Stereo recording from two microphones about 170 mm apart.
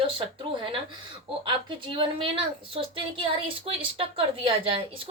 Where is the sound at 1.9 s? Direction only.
30° right (ahead or behind).